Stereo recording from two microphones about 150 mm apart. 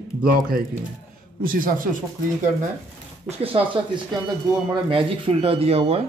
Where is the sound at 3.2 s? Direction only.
35° right (ahead or behind).